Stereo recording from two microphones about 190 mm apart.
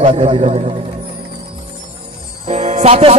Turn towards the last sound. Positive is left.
turn(degrees=-30)  # may be behind; listen again after turning